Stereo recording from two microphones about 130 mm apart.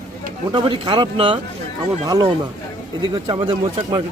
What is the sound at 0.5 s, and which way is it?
Speech, 40° right (ahead or behind).